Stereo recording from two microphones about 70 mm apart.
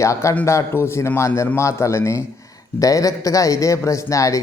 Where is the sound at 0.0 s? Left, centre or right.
Left.